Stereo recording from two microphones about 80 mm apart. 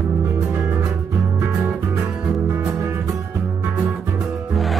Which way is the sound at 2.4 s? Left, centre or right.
Right.